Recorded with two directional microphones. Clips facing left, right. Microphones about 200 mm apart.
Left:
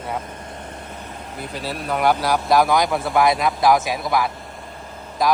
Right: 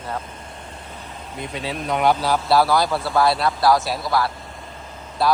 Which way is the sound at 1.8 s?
5° left (ahead or behind).